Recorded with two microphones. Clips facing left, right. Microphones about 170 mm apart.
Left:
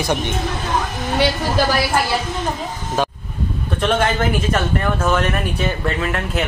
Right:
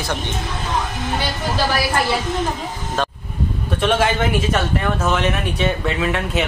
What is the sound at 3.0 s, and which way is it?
Vehicle, 10° left (ahead or behind).